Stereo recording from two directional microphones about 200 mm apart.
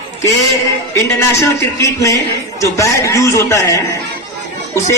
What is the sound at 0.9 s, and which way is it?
A man's voice, 15° left (ahead or behind).